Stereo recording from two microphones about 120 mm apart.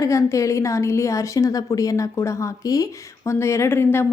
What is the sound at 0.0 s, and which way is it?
A woman's voice, 25° left (ahead or behind).